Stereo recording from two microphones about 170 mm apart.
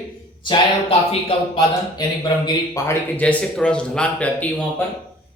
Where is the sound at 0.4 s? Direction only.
30° left (ahead or behind).